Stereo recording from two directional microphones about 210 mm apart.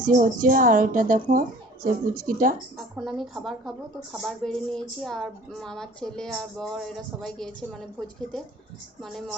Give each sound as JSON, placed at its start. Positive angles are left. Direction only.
{"t": 0.2, "sound": "speech", "side_deg": -40}
{"t": 2.7, "sound": "speech", "side_deg": 0}
{"t": 9.0, "sound": "speech", "side_deg": 0}